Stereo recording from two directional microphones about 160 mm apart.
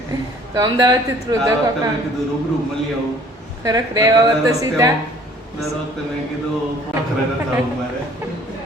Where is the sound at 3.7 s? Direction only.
25° right (ahead or behind).